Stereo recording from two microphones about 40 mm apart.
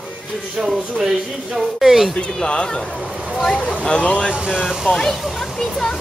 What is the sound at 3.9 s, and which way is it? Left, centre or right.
Speech, left.